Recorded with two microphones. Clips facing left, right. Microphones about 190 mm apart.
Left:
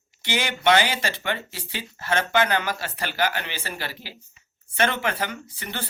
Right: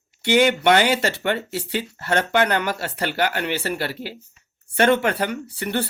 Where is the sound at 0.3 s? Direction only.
60° right (ahead or behind).